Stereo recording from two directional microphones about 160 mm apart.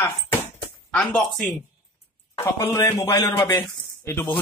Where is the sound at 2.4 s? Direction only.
15° left (ahead or behind).